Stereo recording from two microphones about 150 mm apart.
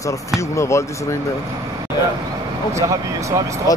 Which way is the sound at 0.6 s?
20° left (ahead or behind).